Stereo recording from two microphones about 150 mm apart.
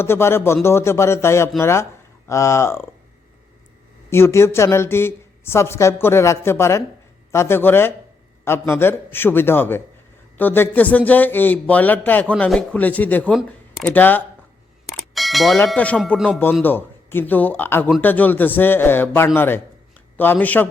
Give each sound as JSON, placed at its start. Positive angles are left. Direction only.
{"t": 0.0, "sound": "a man's voice", "side_deg": 15}
{"t": 4.1, "sound": "a man's voice", "side_deg": 15}
{"t": 14.8, "sound": "a sound", "side_deg": 0}
{"t": 15.7, "sound": "a man's voice", "side_deg": 10}
{"t": 16.1, "sound": "speech", "side_deg": -5}
{"t": 16.6, "sound": "a man's voice", "side_deg": 15}